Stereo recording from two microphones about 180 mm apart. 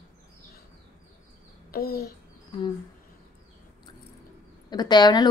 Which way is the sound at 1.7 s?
55° left (ahead or behind).